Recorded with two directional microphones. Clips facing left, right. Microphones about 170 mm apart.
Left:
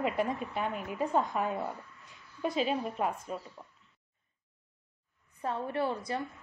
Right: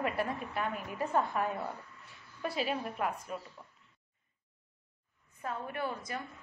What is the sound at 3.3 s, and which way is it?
Speech, 30° left (ahead or behind).